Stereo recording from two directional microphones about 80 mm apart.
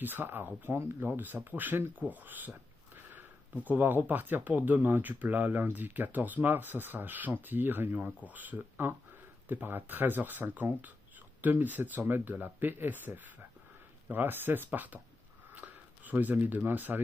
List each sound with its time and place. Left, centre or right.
0.0 s speech: right
3.6 s speech: right